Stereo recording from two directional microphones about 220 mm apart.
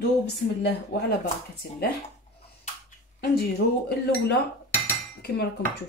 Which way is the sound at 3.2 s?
45° left (ahead or behind).